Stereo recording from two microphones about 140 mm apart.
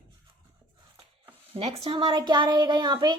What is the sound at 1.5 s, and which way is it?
Speech, 40° right (ahead or behind).